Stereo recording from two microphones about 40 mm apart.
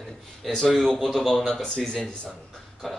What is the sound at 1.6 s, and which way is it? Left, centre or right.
Speech, centre.